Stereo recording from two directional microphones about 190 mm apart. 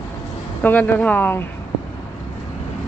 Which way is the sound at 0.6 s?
10° left (ahead or behind).